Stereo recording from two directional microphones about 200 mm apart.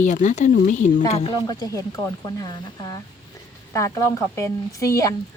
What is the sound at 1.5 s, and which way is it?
Speech, 15° left (ahead or behind).